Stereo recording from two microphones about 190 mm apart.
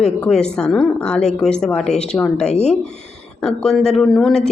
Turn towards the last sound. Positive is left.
turn(degrees=0)  # may be behind; listen again after turning